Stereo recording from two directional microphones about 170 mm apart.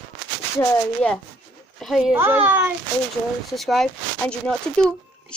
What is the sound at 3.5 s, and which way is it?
Speech, centre (ahead or behind).